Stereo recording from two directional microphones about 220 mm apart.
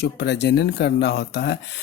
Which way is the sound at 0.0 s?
50° left (ahead or behind).